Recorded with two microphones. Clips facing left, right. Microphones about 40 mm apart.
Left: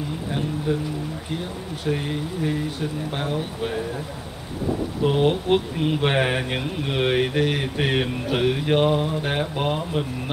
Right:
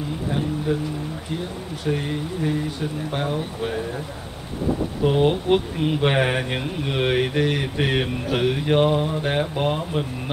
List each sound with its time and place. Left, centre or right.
0.7 s speech: centre
1.9 s speech: centre
5.0 s speech: centre